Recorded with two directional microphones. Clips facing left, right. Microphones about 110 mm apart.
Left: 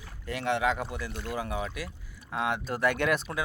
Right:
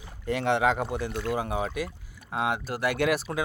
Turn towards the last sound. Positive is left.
turn(degrees=-90)